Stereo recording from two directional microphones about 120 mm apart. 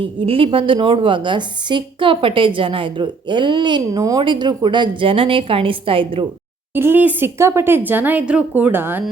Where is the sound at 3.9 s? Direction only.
30° right (ahead or behind).